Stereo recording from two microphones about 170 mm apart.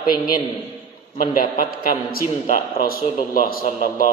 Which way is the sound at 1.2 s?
55° left (ahead or behind).